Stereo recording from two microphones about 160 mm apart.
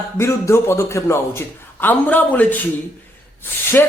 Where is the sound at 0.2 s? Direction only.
15° left (ahead or behind).